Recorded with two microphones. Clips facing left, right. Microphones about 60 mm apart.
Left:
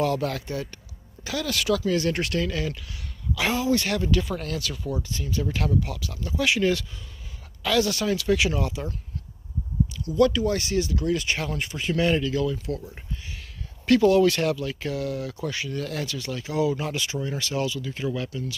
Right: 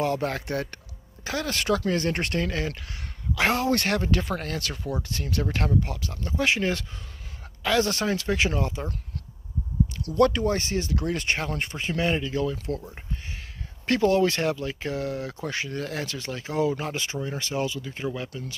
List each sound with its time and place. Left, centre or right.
0.0 s speech: right
0.5 s speech: right
1.2 s speech: right
5.7 s speech: right
10.0 s speech: right
10.5 s speech: right
11.8 s speech: right
13.8 s speech: right